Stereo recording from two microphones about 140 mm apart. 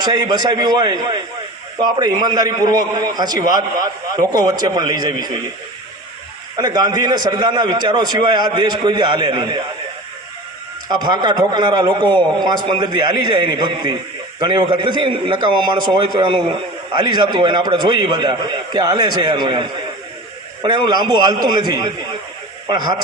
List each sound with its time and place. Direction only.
0.2 s a man's voice: 30° right (ahead or behind)
6.6 s a man's voice: 30° right (ahead or behind)
10.8 s a man's voice: 30° right (ahead or behind)